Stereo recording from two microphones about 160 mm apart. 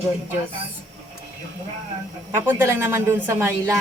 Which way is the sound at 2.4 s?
15° right (ahead or behind).